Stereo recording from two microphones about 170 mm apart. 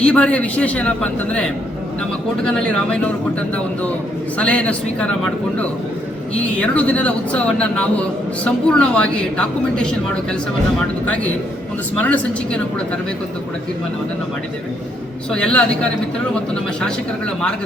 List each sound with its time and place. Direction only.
0.0 s a woman's voice: 5° left (ahead or behind)
4.4 s a woman's voice: 5° left (ahead or behind)
11.9 s speech: 10° left (ahead or behind)
15.3 s a woman's voice: 5° left (ahead or behind)